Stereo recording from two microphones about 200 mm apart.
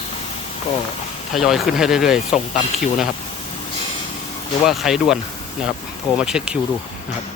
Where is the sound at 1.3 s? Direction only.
Centre (ahead or behind).